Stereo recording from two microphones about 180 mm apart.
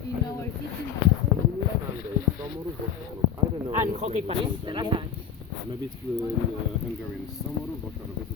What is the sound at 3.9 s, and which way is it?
Speech, 40° right (ahead or behind).